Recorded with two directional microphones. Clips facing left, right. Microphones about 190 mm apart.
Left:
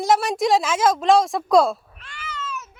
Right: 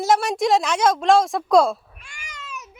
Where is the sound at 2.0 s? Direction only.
15° right (ahead or behind).